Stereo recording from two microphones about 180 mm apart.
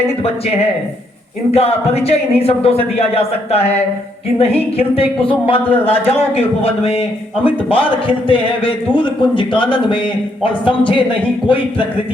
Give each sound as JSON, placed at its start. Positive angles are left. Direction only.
{"t": 0.2, "sound": "a man's voice", "side_deg": 35}